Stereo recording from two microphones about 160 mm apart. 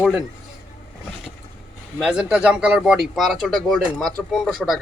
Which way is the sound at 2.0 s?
5° right (ahead or behind).